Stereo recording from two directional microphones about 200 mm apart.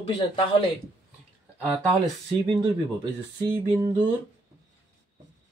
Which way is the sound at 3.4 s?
20° right (ahead or behind).